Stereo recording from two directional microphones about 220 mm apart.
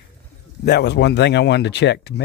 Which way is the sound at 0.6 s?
50° left (ahead or behind).